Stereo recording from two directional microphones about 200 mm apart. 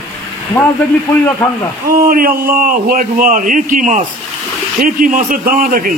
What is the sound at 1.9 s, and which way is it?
A man's voice, 45° right (ahead or behind).